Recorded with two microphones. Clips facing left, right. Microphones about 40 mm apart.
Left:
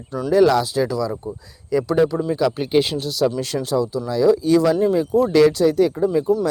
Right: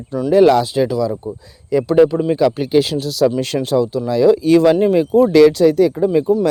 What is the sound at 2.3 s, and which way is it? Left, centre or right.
Speech, right.